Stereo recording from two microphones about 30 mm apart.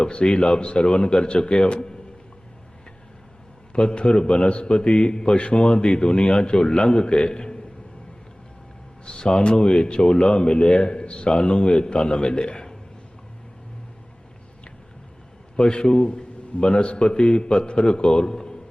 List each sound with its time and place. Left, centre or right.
0.3 s speech: left
3.7 s a man's voice: left
9.0 s speech: left
15.5 s speech: left